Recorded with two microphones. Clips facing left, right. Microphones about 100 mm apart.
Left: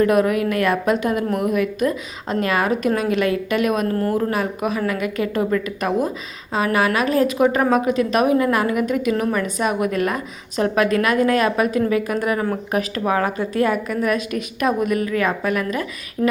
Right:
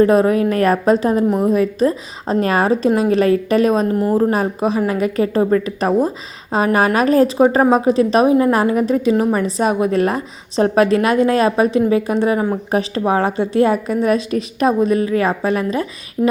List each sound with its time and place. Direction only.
0.0 s a woman's voice: 30° right (ahead or behind)
3.8 s speech: 15° right (ahead or behind)
4.1 s a woman's voice: 30° right (ahead or behind)